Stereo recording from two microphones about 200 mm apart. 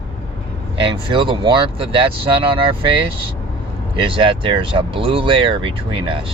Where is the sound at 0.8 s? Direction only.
25° right (ahead or behind).